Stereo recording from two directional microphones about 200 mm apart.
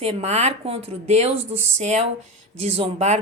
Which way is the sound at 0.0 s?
35° right (ahead or behind).